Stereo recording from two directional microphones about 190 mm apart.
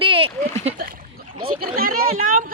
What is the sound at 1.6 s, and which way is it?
Speech, 50° right (ahead or behind).